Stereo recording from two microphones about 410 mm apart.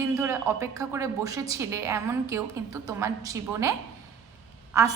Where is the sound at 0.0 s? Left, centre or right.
Centre.